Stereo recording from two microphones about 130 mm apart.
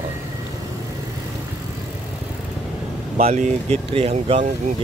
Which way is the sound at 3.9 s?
50° right (ahead or behind).